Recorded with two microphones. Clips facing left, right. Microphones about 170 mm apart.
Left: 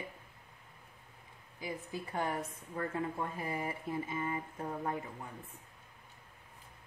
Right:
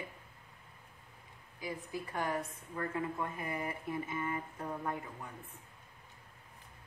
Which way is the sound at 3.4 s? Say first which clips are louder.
Left 1 dB; 30° left (ahead or behind).